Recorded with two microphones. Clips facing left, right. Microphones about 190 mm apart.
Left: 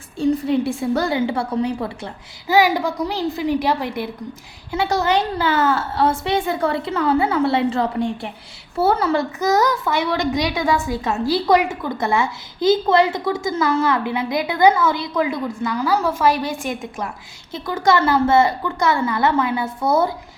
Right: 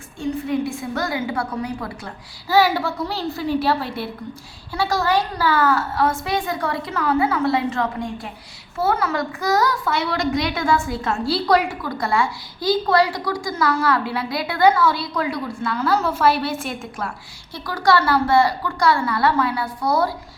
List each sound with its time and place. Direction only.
0.2 s a child's voice: 35° left (ahead or behind)
2.5 s a woman's voice: 15° left (ahead or behind)